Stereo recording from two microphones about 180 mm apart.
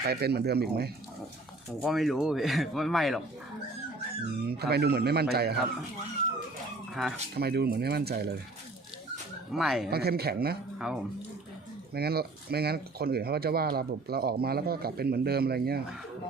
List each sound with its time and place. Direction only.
0.0 s speech: 60° right (ahead or behind)
1.8 s speech: centre (ahead or behind)
4.4 s speech: 60° right (ahead or behind)
6.9 s speech: centre (ahead or behind)
7.3 s speech: 60° right (ahead or behind)
9.5 s speech: centre (ahead or behind)
9.9 s speech: 60° right (ahead or behind)
10.8 s speech: 5° right (ahead or behind)
11.9 s speech: 60° right (ahead or behind)